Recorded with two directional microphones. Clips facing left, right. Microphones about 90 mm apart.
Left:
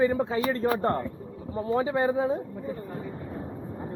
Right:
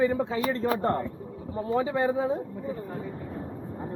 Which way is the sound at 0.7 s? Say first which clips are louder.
Even; 5° right (ahead or behind).